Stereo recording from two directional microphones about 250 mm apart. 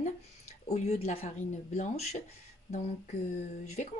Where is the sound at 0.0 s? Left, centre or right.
Left.